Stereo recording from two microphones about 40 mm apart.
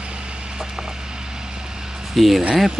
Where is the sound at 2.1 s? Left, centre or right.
Centre.